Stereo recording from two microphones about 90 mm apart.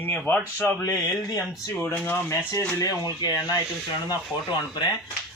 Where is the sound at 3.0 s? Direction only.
45° left (ahead or behind).